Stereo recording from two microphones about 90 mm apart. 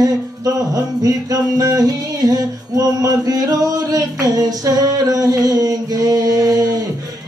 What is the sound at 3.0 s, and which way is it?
Mantra, 45° right (ahead or behind).